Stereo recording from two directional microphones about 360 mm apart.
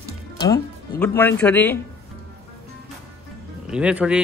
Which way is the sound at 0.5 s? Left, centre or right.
Centre.